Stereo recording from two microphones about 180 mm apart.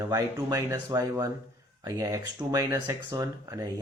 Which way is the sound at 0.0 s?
15° right (ahead or behind).